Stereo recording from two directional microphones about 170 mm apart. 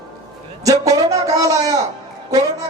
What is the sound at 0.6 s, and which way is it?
Speech, 20° right (ahead or behind).